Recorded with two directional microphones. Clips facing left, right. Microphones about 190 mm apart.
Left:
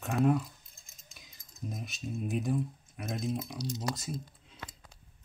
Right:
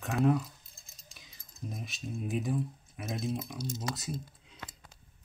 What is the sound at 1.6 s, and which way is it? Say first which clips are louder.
Speech: left 1 dB; centre (ahead or behind).